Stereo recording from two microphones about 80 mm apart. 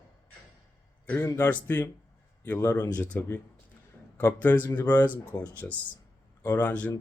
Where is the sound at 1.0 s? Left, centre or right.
Left.